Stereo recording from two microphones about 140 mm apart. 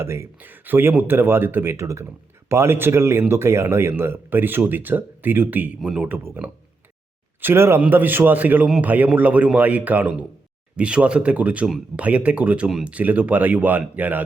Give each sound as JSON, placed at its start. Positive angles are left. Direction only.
{"t": 0.0, "sound": "speech", "side_deg": -20}